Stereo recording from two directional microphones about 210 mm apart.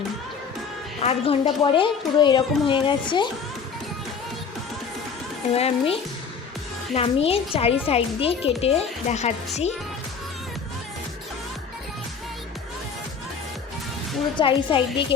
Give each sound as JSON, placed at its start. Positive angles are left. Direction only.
{"t": 1.0, "sound": "speech", "side_deg": 25}
{"t": 5.5, "sound": "speech", "side_deg": 30}
{"t": 14.3, "sound": "speech", "side_deg": 25}